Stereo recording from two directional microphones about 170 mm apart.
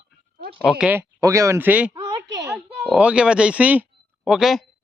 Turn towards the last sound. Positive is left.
turn(degrees=0)  # may be behind; listen again after turning